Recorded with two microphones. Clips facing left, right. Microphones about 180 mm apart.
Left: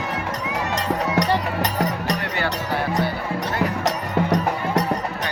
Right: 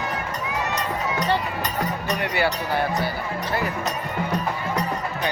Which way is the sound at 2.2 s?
10° right (ahead or behind).